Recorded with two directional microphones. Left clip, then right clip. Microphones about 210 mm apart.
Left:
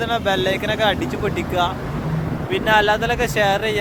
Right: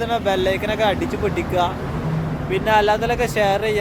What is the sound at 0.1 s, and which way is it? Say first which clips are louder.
Speech: right 1 dB; 5° right (ahead or behind).